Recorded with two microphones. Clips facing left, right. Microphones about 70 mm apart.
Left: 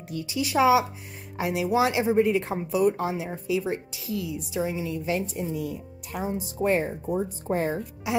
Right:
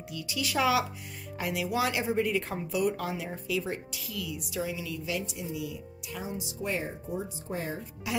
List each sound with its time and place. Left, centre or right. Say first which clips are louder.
0.1 s a woman's voice: left 6 dB; left
8.1 s speech: left 6 dB; left